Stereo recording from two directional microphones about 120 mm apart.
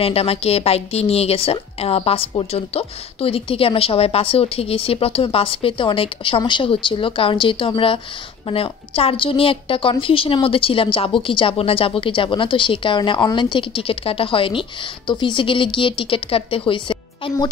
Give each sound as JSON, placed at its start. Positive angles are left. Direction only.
{"t": 0.0, "sound": "a woman's voice", "side_deg": 55}